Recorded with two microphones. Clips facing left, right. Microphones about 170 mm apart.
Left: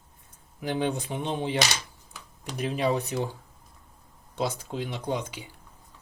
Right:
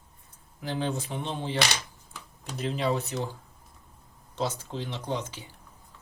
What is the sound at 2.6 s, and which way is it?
Speech, 15° left (ahead or behind).